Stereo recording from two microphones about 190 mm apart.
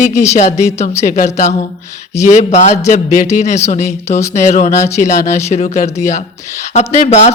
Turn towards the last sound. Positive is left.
turn(degrees=40)  # may be behind; listen again after turning